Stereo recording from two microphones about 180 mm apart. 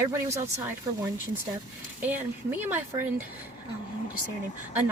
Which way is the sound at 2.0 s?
10° right (ahead or behind).